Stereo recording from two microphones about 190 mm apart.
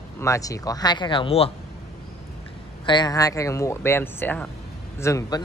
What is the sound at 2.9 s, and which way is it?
A man's voice, 20° left (ahead or behind).